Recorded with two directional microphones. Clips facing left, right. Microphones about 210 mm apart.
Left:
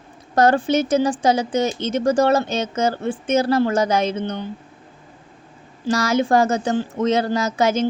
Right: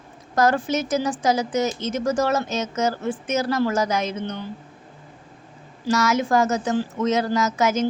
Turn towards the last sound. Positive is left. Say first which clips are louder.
# left 2 dB
turn(degrees=30)  # may be behind; listen again after turning